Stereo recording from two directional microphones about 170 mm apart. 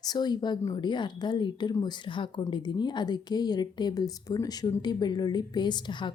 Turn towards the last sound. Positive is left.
turn(degrees=25)  # may be behind; listen again after turning